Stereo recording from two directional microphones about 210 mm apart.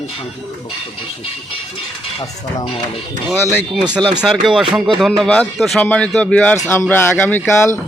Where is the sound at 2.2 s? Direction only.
25° left (ahead or behind).